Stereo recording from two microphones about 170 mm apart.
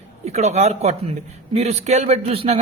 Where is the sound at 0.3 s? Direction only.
40° right (ahead or behind).